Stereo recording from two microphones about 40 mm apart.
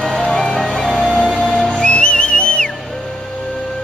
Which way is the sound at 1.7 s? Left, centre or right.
Left.